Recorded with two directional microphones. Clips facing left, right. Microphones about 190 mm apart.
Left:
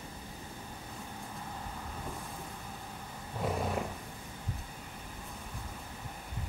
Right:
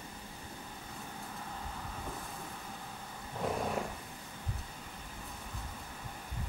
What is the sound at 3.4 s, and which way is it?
Roaring cats, 5° left (ahead or behind).